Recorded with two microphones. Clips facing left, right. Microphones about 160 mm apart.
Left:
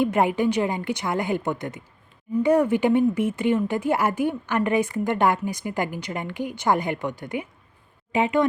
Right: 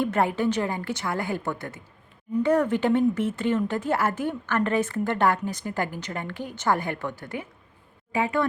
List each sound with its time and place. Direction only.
0.0 s speech: 15° left (ahead or behind)